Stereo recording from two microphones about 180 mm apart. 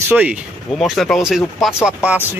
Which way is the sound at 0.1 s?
5° right (ahead or behind).